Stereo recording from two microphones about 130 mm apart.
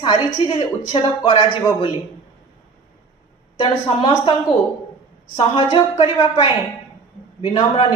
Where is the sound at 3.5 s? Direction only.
40° left (ahead or behind).